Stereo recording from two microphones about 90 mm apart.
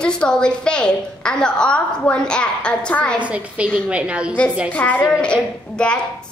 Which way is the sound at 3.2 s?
15° right (ahead or behind).